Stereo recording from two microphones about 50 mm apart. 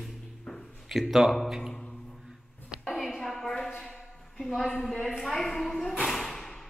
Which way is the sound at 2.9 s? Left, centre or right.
Centre.